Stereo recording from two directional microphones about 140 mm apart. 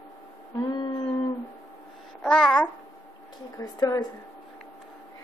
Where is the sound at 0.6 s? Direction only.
30° left (ahead or behind).